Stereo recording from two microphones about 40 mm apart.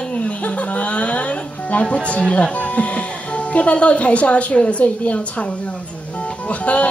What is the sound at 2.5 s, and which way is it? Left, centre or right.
Speech, left.